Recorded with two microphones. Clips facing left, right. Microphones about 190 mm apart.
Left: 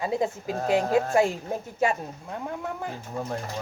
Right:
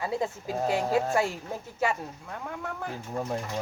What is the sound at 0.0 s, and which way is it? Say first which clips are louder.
A woman's voice: left 3 dB; 20° left (ahead or behind).